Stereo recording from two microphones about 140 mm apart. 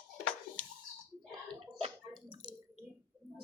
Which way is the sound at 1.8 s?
35° right (ahead or behind).